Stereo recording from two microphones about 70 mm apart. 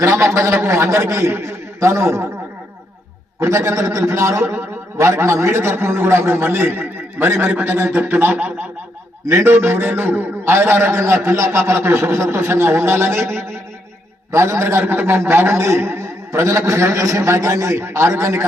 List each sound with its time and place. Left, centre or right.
0.0 s a man's voice: right
3.4 s a man's voice: right
9.2 s a man's voice: right